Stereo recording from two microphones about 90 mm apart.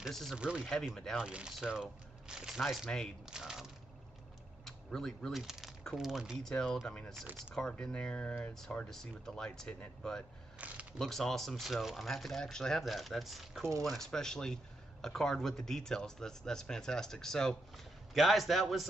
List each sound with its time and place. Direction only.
0.1 s speech: centre (ahead or behind)
0.4 s speech: 10° right (ahead or behind)
0.7 s speech: 5° left (ahead or behind)
3.3 s a sound: 5° right (ahead or behind)
4.6 s speech: 5° left (ahead or behind)
6.5 s speech: 10° left (ahead or behind)
10.6 s speech: 15° right (ahead or behind)
11.0 s speech: 5° left (ahead or behind)